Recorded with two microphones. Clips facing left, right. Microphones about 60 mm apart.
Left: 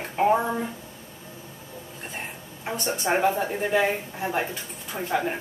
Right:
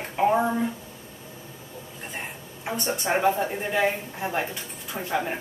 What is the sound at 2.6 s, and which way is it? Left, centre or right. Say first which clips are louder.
A woman's voice: even; centre.